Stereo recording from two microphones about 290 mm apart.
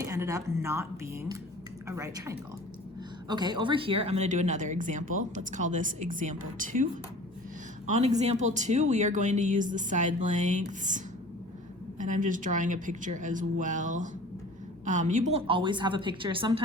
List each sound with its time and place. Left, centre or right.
0.0 s a woman's voice: centre; by 6.8 s right
7.9 s a woman's voice: right